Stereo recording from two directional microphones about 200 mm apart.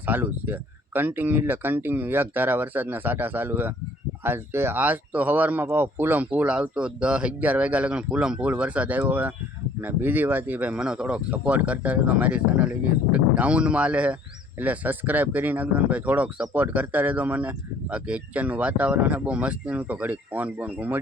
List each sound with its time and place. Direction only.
0.0 s speech: 10° right (ahead or behind)